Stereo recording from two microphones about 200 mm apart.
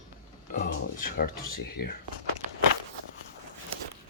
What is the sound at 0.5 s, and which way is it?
Speech, 45° left (ahead or behind).